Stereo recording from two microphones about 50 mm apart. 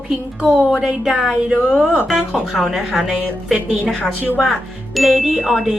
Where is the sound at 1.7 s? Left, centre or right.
Left.